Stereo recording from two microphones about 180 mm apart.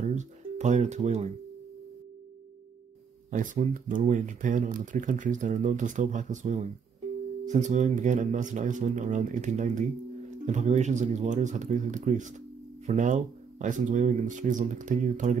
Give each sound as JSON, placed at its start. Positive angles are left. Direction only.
{"t": 0.0, "sound": "speech", "side_deg": -40}
{"t": 3.3, "sound": "speech", "side_deg": -45}